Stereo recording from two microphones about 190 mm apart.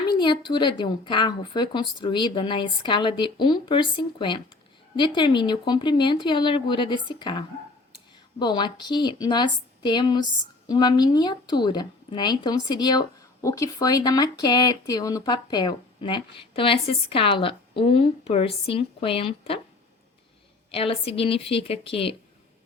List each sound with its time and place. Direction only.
0.1 s a woman's voice: 25° left (ahead or behind)
20.7 s a woman's voice: 30° left (ahead or behind)